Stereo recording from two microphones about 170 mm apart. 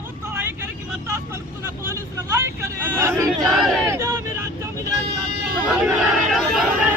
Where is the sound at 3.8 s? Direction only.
15° right (ahead or behind).